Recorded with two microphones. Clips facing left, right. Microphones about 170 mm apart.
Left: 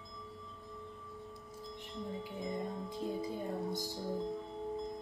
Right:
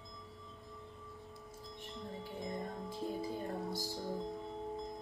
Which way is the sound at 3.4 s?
Centre (ahead or behind).